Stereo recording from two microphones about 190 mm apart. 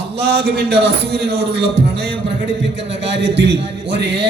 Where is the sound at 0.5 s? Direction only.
60° right (ahead or behind).